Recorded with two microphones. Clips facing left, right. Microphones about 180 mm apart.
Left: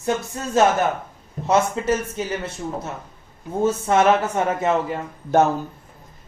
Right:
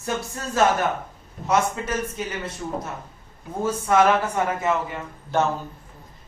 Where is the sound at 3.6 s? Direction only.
25° left (ahead or behind).